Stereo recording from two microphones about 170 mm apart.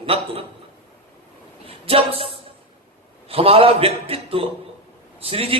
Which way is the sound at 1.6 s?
35° right (ahead or behind).